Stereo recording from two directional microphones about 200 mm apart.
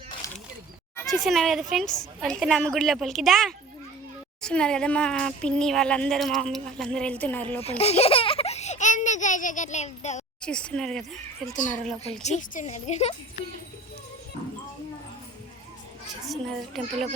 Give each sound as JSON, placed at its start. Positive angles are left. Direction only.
{"t": 0.2, "sound": "a sound", "side_deg": 15}
{"t": 1.0, "sound": "speech", "side_deg": 0}
{"t": 7.8, "sound": "a sound", "side_deg": 30}
{"t": 10.4, "sound": "speech", "side_deg": 5}
{"t": 12.2, "sound": "a woman's voice", "side_deg": 35}
{"t": 16.3, "sound": "speech", "side_deg": 0}